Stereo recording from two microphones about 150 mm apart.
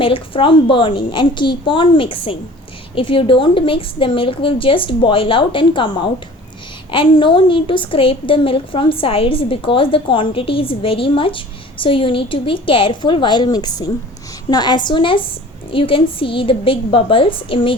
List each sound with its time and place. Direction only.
0.0 s a woman's voice: 35° left (ahead or behind)